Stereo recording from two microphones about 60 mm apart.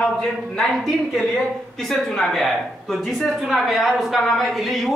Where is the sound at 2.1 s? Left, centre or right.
Centre.